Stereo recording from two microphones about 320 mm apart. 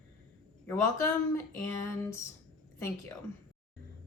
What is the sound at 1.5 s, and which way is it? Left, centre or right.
Speech, centre.